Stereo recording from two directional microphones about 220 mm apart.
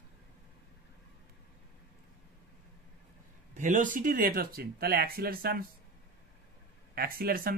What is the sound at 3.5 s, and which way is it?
Speech, 35° right (ahead or behind).